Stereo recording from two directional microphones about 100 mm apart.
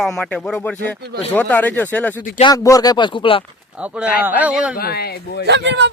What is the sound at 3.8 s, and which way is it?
Speech, 15° right (ahead or behind).